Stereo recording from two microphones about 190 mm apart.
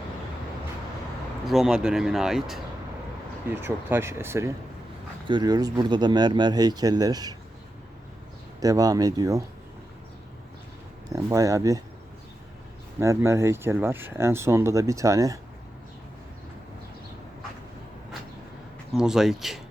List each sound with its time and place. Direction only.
1.5 s speech: centre (ahead or behind)
3.6 s speech: 10° right (ahead or behind)
8.6 s speech: 20° right (ahead or behind)
11.1 s speech: 15° right (ahead or behind)
13.0 s speech: 15° right (ahead or behind)
18.9 s speech: 5° right (ahead or behind)